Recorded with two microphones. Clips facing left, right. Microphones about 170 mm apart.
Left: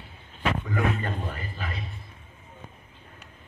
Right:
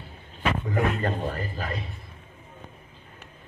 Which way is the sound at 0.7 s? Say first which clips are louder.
Right 2 dB; 35° right (ahead or behind).